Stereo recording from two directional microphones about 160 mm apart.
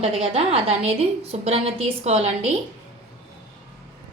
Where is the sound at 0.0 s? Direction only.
40° right (ahead or behind).